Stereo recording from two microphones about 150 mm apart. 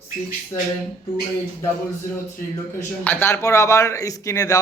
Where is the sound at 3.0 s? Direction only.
15° left (ahead or behind).